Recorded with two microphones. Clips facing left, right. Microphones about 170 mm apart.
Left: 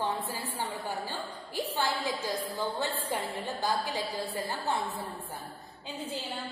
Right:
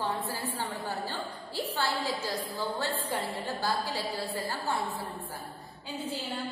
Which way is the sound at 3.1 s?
20° left (ahead or behind).